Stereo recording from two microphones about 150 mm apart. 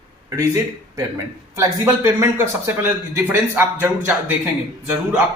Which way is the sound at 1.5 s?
20° right (ahead or behind).